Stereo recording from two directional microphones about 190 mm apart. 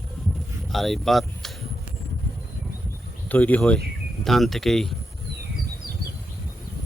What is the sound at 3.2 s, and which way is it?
Speech, 10° left (ahead or behind).